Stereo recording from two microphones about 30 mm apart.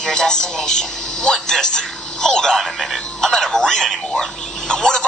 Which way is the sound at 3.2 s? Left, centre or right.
Centre.